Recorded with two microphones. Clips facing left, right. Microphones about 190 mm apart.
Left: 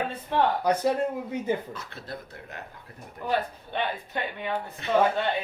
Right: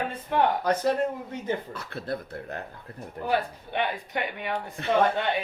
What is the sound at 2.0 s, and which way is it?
Speech, 55° right (ahead or behind).